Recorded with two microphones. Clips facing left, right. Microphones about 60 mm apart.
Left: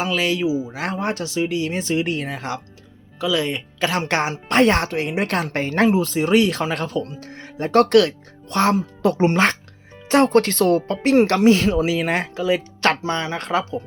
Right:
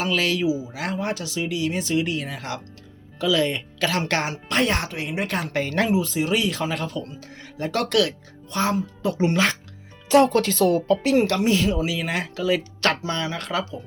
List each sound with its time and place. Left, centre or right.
0.1 s speech: left
3.2 s speech: centre
4.4 s speech: left
4.9 s speech: left
5.6 s speech: left
6.0 s speech: left
7.3 s speech: left
8.4 s speech: left
9.1 s speech: left
11.2 s speech: left
12.5 s speech: left